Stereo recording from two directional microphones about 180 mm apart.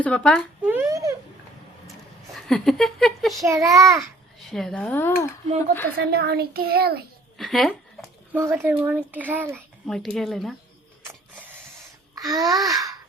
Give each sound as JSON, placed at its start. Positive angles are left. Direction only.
{"t": 0.0, "sound": "speech", "side_deg": 5}
{"t": 0.6, "sound": "a sound", "side_deg": -10}
{"t": 2.3, "sound": "speech", "side_deg": 0}
{"t": 3.4, "sound": "speech", "side_deg": -15}
{"t": 4.4, "sound": "speech", "side_deg": 0}
{"t": 6.1, "sound": "a child's voice", "side_deg": -60}
{"t": 7.3, "sound": "speech", "side_deg": 0}
{"t": 8.3, "sound": "speech", "side_deg": -10}
{"t": 9.8, "sound": "speech", "side_deg": 5}
{"t": 12.1, "sound": "babbling", "side_deg": -20}